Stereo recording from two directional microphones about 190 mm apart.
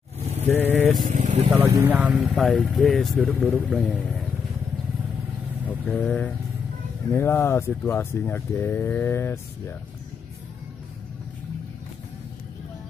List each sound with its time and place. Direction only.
0.5 s vehicle: 10° left (ahead or behind)
1.0 s speech: 40° right (ahead or behind)
1.5 s speech: 10° right (ahead or behind)
5.7 s speech: 5° left (ahead or behind)